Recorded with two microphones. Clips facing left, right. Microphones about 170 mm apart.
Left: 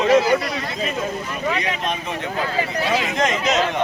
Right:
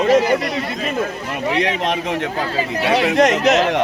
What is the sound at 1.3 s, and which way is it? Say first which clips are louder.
Speech: right 4 dB; 90° right.